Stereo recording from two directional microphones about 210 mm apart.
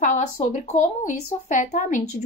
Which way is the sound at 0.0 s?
35° left (ahead or behind).